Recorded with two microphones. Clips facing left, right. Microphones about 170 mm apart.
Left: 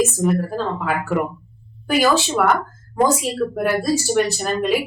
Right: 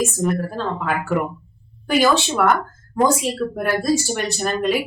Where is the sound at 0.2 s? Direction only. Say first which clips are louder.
Left 2 dB; 5° left (ahead or behind).